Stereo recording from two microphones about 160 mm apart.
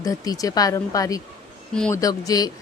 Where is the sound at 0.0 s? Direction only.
20° left (ahead or behind).